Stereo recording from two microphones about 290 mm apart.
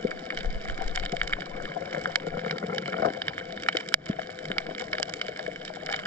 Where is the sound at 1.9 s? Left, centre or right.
Centre.